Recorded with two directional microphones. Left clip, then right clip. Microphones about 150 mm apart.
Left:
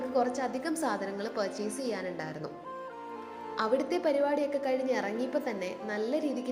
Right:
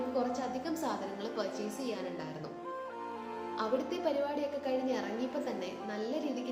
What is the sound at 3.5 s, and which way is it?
A woman's voice, 55° left (ahead or behind).